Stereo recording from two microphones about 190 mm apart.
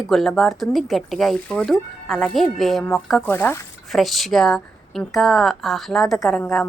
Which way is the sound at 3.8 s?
Centre (ahead or behind).